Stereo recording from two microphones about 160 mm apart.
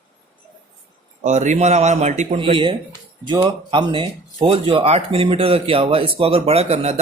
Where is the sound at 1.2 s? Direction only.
50° right (ahead or behind).